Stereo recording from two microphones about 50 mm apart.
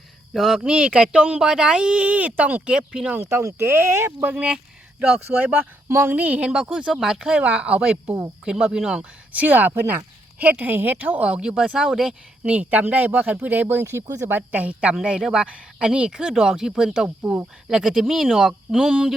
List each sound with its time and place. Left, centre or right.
0.3 s speech: centre
0.6 s speech: right
3.2 s speech: right
4.4 s speech: right
7.3 s speech: right
9.3 s speech: right
11.3 s speech: centre
12.4 s speech: right; by 18.9 s centre